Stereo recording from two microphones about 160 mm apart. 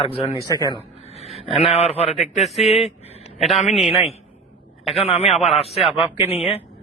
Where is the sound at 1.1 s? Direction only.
40° left (ahead or behind).